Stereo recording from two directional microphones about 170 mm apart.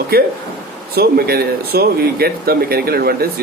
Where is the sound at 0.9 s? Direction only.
65° right (ahead or behind).